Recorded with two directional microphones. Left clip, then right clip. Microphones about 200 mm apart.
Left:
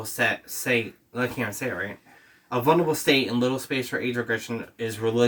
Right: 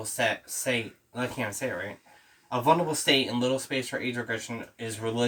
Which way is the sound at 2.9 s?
10° right (ahead or behind).